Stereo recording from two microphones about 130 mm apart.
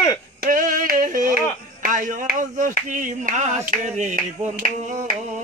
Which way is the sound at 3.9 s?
65° right (ahead or behind).